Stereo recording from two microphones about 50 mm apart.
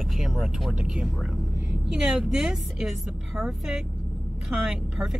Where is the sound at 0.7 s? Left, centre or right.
Centre.